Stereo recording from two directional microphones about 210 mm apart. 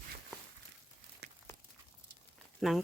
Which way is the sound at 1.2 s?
50° right (ahead or behind).